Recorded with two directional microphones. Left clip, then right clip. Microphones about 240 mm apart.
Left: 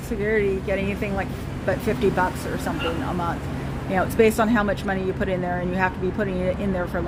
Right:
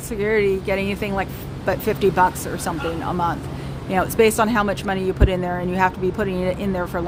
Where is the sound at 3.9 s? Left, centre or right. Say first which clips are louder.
Right 2 dB; centre.